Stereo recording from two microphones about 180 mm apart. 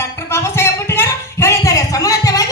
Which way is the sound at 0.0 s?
15° left (ahead or behind).